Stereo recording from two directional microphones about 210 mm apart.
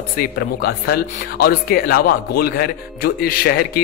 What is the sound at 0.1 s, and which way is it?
A man's voice, 45° left (ahead or behind).